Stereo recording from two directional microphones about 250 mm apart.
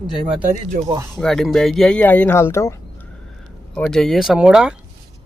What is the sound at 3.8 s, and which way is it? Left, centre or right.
Speech, centre.